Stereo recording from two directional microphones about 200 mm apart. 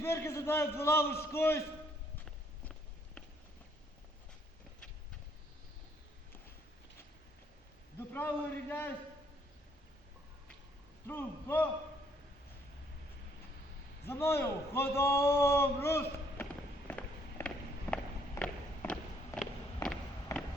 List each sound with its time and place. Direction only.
0.0 s a man's voice: 15° left (ahead or behind)
8.1 s a man's voice: 10° left (ahead or behind)
11.0 s a man's voice: 10° left (ahead or behind)
14.0 s a man's voice: 10° left (ahead or behind)
17.9 s a sound: 5° left (ahead or behind)
20.3 s a sound: 15° left (ahead or behind)